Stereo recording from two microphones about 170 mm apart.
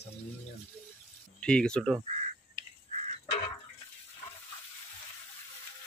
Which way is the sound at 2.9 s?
45° right (ahead or behind).